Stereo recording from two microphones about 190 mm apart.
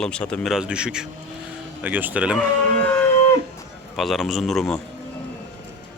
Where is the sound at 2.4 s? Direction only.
10° left (ahead or behind).